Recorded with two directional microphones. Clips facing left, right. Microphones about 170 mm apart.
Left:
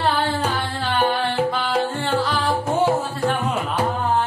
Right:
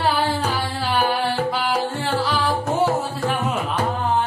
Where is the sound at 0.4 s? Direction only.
Centre (ahead or behind).